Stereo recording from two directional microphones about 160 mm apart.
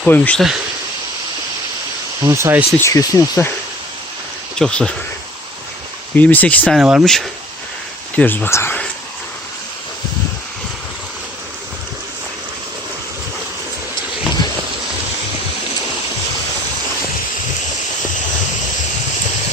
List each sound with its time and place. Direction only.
0.0 s speech: 5° left (ahead or behind)
2.2 s speech: 15° right (ahead or behind)
2.7 s speech: 20° left (ahead or behind)
4.5 s speech: 5° left (ahead or behind)
6.1 s speech: 10° left (ahead or behind)
6.7 s speech: 5° right (ahead or behind); by 8.9 s 10° left (ahead or behind)